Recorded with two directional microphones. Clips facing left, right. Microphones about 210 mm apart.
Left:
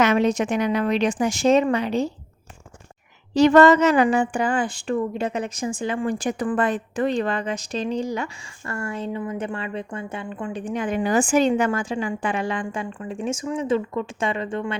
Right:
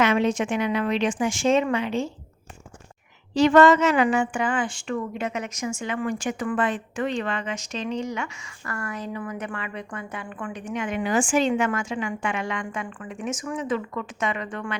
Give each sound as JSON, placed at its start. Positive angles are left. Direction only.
{"t": 0.0, "sound": "speech", "side_deg": 40}
{"t": 3.3, "sound": "speech", "side_deg": 40}